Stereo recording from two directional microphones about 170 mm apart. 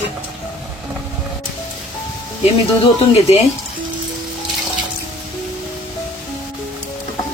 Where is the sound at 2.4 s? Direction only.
40° left (ahead or behind).